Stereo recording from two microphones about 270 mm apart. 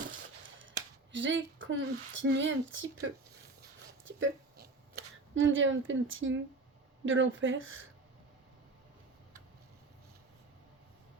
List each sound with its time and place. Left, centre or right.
1.1 s speech: right
4.2 s a sound: right
7.0 s speech: right